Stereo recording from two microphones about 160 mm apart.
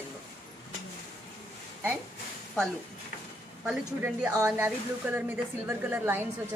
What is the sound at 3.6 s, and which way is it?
Speech, 5° right (ahead or behind).